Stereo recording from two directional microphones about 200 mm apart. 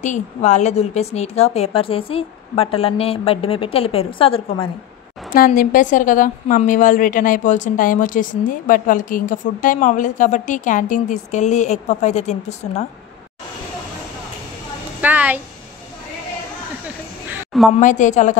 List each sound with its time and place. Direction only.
0.0 s a woman's voice: 35° left (ahead or behind)
5.3 s a woman's voice: 45° left (ahead or behind)
15.0 s a sound: 10° right (ahead or behind)
17.7 s a woman's voice: 40° left (ahead or behind)